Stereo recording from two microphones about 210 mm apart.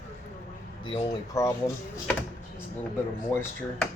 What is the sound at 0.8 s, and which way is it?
Speech, 20° left (ahead or behind).